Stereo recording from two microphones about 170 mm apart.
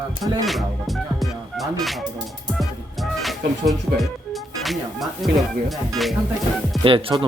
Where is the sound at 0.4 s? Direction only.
Centre (ahead or behind).